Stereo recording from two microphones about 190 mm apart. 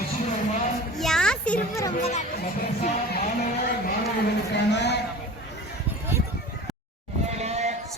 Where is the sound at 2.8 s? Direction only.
40° left (ahead or behind).